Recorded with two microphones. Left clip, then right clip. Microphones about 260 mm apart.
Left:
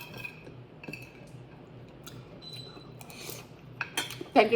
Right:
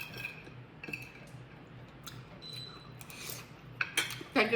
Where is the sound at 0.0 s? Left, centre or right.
Centre.